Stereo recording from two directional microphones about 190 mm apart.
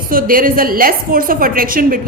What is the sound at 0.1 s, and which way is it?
A woman's voice, 50° right (ahead or behind).